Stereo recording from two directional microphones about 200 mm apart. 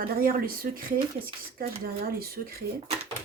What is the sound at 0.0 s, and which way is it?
Speech, 45° right (ahead or behind).